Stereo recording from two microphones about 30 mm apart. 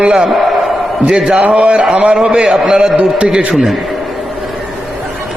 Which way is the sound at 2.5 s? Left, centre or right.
Right.